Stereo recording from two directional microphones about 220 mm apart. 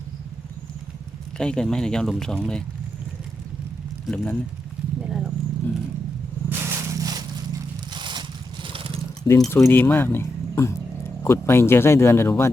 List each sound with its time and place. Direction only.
1.4 s speech: 5° left (ahead or behind)
4.0 s speech: 5° left (ahead or behind)
5.0 s vehicle: centre (ahead or behind)
6.5 s crushing: 10° right (ahead or behind)
7.9 s a sound: 20° right (ahead or behind)
8.6 s wild animals: 25° right (ahead or behind)
9.4 s speech: 10° left (ahead or behind)